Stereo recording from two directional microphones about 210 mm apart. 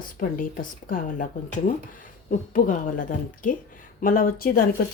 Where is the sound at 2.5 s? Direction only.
40° left (ahead or behind).